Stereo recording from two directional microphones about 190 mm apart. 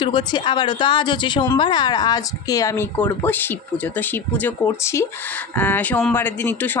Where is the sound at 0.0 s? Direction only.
25° left (ahead or behind).